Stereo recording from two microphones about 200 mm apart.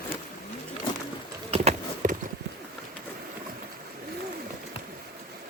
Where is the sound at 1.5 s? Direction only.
30° right (ahead or behind).